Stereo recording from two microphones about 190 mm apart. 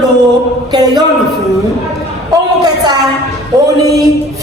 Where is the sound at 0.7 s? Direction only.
20° right (ahead or behind).